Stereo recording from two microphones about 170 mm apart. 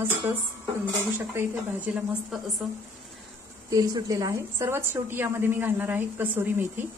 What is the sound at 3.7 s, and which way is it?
A woman's voice, 20° right (ahead or behind).